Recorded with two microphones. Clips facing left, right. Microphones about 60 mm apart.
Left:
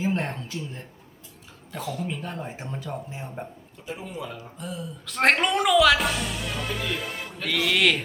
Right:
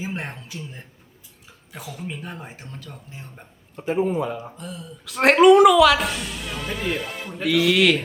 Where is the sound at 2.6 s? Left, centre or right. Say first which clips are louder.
Left 7 dB; centre.